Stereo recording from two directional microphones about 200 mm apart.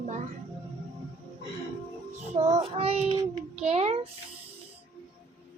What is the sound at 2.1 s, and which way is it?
Child singing, 35° right (ahead or behind).